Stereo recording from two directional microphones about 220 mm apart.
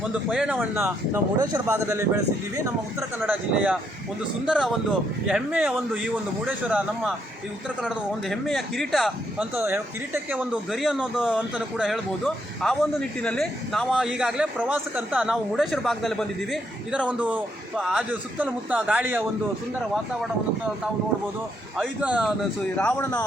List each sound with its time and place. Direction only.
0.3 s a man's voice: 5° right (ahead or behind)
3.2 s a man's voice: 5° right (ahead or behind)
21.8 s a man's voice: 5° right (ahead or behind)
22.8 s speech: 5° left (ahead or behind)